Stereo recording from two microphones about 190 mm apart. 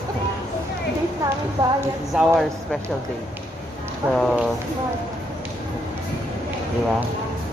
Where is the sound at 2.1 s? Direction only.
Centre (ahead or behind).